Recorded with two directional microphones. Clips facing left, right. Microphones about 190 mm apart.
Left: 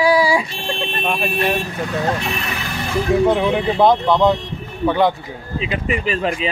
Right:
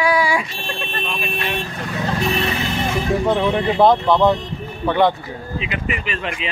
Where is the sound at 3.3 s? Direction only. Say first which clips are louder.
Left 1 dB; 10° left (ahead or behind).